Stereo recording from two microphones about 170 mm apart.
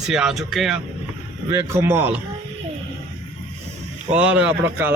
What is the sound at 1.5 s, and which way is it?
Speech, 15° right (ahead or behind).